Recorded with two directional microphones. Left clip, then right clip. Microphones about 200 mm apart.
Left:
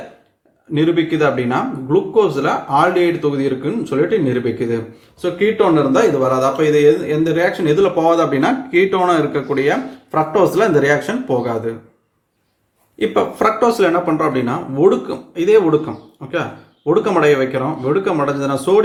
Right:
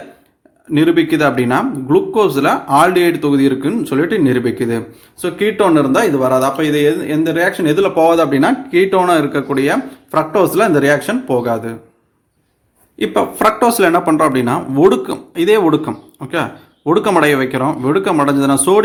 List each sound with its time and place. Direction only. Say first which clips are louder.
0.7 s speech: right 4 dB; 50° right (ahead or behind); by 11.7 s 30° right (ahead or behind)
13.0 s speech: right 2 dB; 40° right (ahead or behind)